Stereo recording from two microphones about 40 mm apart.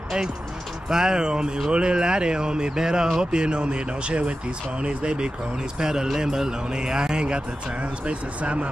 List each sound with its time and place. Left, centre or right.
0.8 s a man's voice: centre
8.1 s speech: right